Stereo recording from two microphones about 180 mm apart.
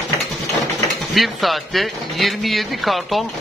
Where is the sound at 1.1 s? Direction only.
Centre (ahead or behind).